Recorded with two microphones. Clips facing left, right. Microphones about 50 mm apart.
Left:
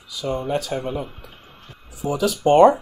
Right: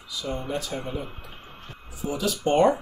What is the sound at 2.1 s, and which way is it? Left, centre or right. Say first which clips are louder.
Speech: left 7 dB; left.